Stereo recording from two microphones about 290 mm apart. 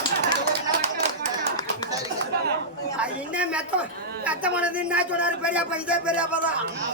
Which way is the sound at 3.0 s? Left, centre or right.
Centre.